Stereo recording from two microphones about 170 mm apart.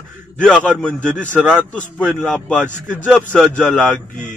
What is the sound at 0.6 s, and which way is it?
Speech, 10° right (ahead or behind).